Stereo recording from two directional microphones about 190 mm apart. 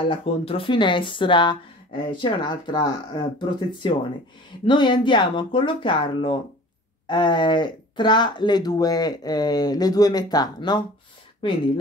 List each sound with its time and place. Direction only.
0.1 s speech: 30° left (ahead or behind)